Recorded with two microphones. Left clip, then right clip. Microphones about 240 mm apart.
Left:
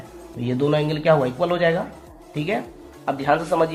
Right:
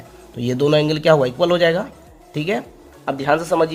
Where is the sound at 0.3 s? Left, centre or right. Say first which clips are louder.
Right 5 dB; right.